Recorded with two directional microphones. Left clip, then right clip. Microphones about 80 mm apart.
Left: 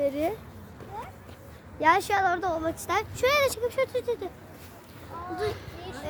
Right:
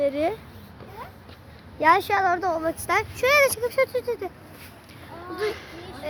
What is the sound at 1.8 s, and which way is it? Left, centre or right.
A woman's voice, right.